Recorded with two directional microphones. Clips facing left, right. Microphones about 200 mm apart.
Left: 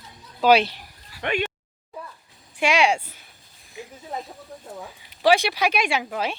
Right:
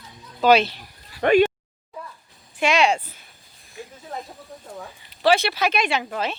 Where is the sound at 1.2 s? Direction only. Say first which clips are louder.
Right 10 dB; 40° right (ahead or behind).